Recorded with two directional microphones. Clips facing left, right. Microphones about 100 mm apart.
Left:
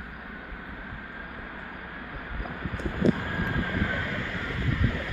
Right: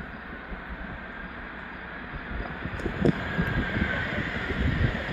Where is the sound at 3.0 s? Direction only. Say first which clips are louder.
Even; 40° right (ahead or behind).